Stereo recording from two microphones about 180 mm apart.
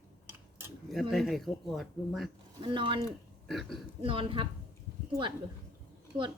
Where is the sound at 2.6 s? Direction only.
25° right (ahead or behind).